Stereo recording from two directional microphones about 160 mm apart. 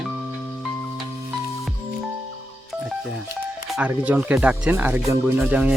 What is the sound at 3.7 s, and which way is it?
Speech, 10° right (ahead or behind).